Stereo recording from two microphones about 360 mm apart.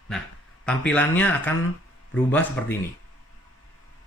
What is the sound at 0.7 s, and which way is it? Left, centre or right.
Speech, centre.